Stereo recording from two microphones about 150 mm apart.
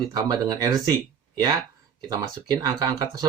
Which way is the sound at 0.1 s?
25° right (ahead or behind).